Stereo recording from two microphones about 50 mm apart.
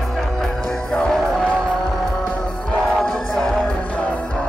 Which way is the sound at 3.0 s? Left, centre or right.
Centre.